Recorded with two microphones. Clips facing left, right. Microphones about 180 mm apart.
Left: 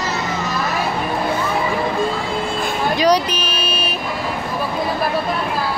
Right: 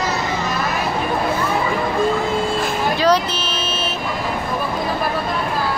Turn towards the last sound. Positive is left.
turn(degrees=15)  # may be behind; listen again after turning